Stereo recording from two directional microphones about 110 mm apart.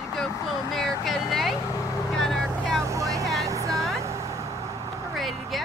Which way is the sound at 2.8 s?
30° right (ahead or behind).